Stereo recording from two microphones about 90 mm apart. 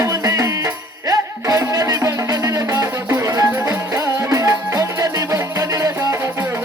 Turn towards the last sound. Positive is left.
turn(degrees=-40)  # may be behind; listen again after turning